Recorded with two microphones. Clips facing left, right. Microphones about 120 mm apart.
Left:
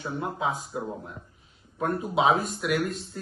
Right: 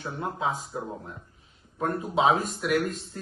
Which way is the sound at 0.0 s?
5° left (ahead or behind).